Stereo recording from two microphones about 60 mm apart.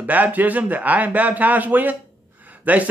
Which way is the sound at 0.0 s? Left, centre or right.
Right.